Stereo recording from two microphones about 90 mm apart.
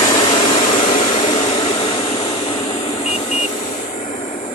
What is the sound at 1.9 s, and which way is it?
Vehicle, 75° left (ahead or behind).